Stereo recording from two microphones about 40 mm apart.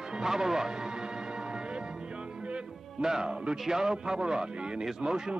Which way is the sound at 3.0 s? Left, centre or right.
Centre.